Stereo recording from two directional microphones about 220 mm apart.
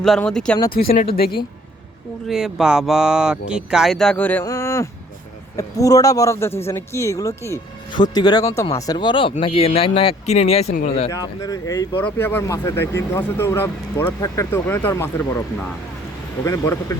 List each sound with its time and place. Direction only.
0.0 s speech: centre (ahead or behind)
0.7 s a woman's voice: 40° left (ahead or behind)
2.2 s speech: centre (ahead or behind); by 11.1 s 30° left (ahead or behind)
11.1 s speech: 15° left (ahead or behind)